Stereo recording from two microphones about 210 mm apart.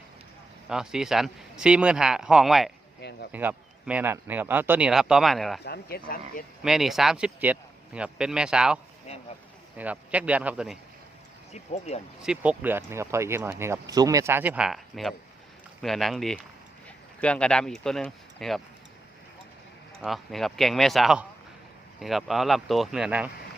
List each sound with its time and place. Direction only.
0.7 s speech: 5° right (ahead or behind)
3.0 s speech: 55° left (ahead or behind)
3.3 s speech: 5° right (ahead or behind)
5.6 s speech: 50° left (ahead or behind)
6.6 s speech: centre (ahead or behind)
9.1 s a sound: 30° left (ahead or behind)
9.7 s speech: 5° right (ahead or behind)
11.5 s speech: 30° left (ahead or behind)
12.2 s speech: 5° right (ahead or behind)
20.0 s speech: centre (ahead or behind)